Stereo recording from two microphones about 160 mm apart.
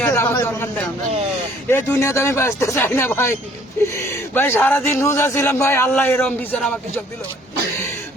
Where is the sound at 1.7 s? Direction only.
15° left (ahead or behind).